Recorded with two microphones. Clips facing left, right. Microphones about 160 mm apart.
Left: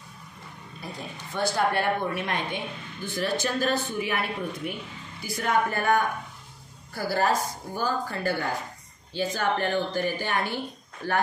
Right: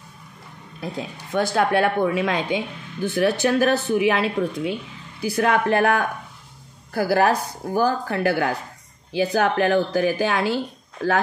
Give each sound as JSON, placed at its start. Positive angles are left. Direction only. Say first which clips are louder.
{"t": 1.3, "sound": "a woman's voice", "louder": "right 6 dB", "side_deg": -80}
{"t": 5.2, "sound": "speech", "louder": "right 6 dB", "side_deg": -70}
{"t": 6.9, "sound": "speech", "louder": "right 6 dB", "side_deg": -60}